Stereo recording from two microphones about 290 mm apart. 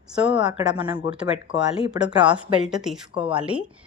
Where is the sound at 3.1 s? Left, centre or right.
Centre.